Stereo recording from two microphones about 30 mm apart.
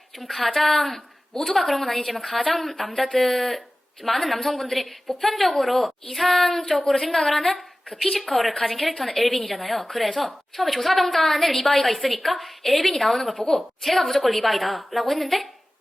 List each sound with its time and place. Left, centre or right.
0.2 s a woman's voice: centre
6.7 s a woman's voice: centre
7.2 s a woman's voice: centre